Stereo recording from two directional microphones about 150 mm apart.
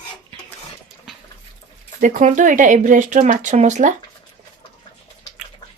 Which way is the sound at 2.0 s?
55° right (ahead or behind).